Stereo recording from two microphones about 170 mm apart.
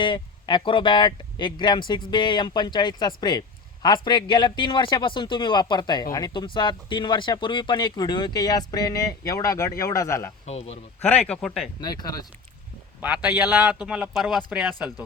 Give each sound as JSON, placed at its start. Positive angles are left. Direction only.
{"t": 0.0, "sound": "a man's voice", "side_deg": 30}
{"t": 10.4, "sound": "a man's voice", "side_deg": 40}
{"t": 11.0, "sound": "speech", "side_deg": 5}
{"t": 11.8, "sound": "a man's voice", "side_deg": 25}
{"t": 13.0, "sound": "speech", "side_deg": -10}